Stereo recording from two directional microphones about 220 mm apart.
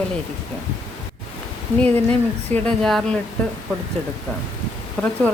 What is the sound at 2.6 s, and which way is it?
Speech, 5° left (ahead or behind).